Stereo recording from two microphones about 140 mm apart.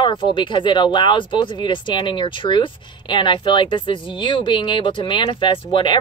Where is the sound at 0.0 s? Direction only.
35° left (ahead or behind).